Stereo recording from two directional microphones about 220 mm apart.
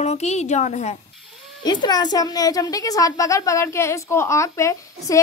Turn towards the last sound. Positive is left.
turn(degrees=15)  # may be behind; listen again after turning